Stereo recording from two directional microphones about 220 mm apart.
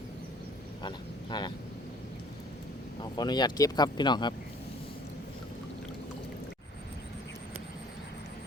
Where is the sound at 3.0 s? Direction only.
20° left (ahead or behind).